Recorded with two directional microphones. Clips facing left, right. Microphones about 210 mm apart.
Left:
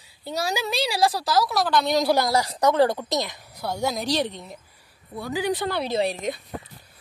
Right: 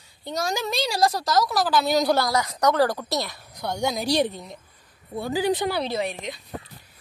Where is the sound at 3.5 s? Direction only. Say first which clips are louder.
Even; 5° left (ahead or behind).